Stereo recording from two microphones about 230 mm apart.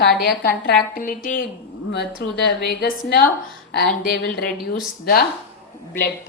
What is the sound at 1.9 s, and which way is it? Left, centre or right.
Speech, left.